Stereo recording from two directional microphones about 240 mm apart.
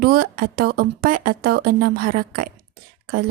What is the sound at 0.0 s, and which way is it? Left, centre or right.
Speech, right.